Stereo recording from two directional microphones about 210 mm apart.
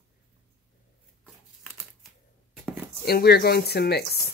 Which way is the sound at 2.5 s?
5° right (ahead or behind).